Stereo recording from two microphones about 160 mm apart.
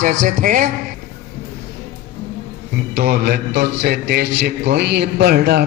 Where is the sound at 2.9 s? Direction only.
85° right.